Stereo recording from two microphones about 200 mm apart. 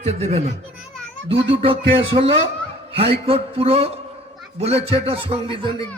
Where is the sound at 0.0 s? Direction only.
30° right (ahead or behind).